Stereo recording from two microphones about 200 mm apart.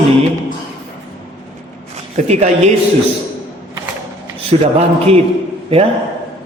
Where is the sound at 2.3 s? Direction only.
35° right (ahead or behind).